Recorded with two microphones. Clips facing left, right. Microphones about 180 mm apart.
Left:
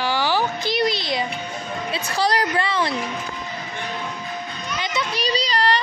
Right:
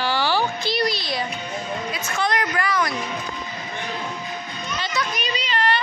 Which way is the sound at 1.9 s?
35° left (ahead or behind).